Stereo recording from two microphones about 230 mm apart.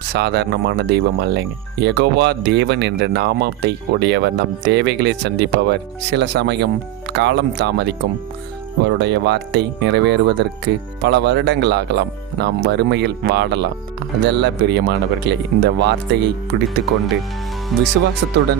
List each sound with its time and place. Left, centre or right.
0.1 s speech: right
17.7 s speech: centre